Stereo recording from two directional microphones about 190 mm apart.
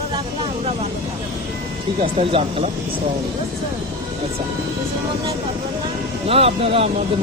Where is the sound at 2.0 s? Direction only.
30° right (ahead or behind).